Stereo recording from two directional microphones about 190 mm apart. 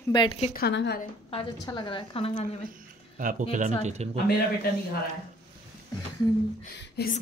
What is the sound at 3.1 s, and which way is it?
Speech, 45° right (ahead or behind).